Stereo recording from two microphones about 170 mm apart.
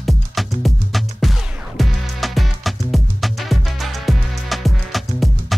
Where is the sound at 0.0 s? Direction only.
Centre (ahead or behind).